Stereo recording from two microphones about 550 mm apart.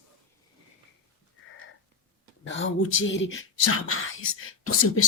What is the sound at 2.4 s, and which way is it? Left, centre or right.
Speech, centre.